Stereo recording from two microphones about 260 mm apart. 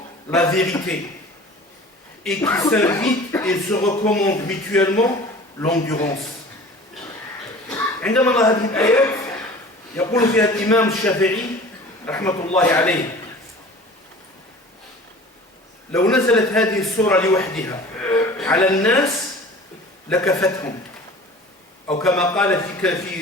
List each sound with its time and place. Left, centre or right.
0.3 s speech: centre
2.2 s speech: centre
7.7 s a man's voice: centre
15.9 s a man's voice: centre
20.1 s speech: centre
21.8 s a man's voice: centre